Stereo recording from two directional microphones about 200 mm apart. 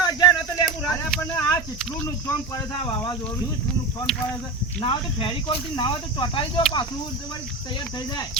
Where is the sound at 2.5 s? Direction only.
20° left (ahead or behind).